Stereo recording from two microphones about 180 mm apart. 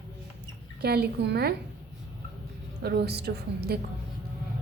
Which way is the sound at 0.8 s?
60° right (ahead or behind).